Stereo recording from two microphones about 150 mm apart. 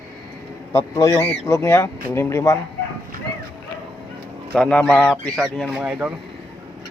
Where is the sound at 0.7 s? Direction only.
20° left (ahead or behind).